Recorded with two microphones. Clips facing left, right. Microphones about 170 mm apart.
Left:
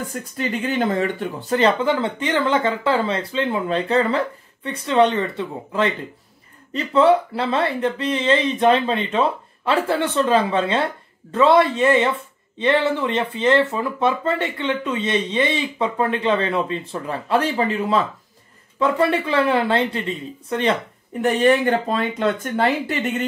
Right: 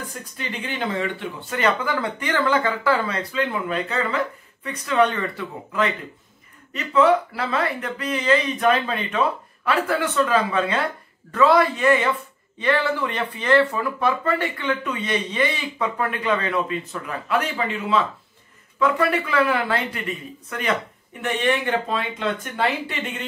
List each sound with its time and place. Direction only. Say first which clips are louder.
0.1 s speech: left 7 dB; 45° left (ahead or behind)